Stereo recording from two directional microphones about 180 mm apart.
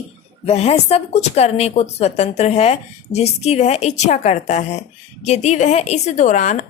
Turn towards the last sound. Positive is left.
turn(degrees=45)  # may be behind; listen again after turning